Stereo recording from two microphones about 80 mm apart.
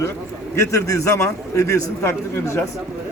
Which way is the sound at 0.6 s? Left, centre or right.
Left.